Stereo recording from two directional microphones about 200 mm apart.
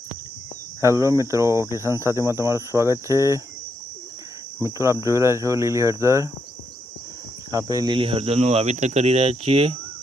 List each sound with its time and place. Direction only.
0.8 s speech: 15° right (ahead or behind)
4.6 s speech: 15° right (ahead or behind)
7.5 s speech: 20° right (ahead or behind)